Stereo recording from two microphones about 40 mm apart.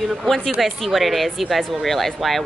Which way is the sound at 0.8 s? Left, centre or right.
Centre.